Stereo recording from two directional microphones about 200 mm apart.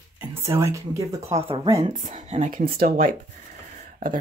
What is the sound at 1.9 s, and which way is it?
Speech, 40° right (ahead or behind).